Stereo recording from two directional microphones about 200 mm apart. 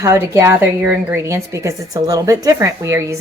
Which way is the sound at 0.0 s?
15° right (ahead or behind).